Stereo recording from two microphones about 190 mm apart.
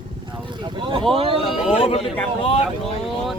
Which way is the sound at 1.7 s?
30° left (ahead or behind).